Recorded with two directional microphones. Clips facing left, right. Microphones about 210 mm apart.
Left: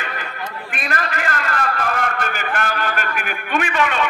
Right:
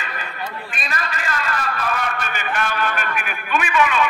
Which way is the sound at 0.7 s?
60° left (ahead or behind).